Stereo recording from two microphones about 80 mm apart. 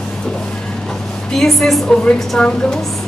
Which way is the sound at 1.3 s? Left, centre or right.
Centre.